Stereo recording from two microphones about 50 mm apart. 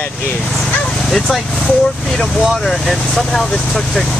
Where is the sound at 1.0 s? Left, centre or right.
Centre.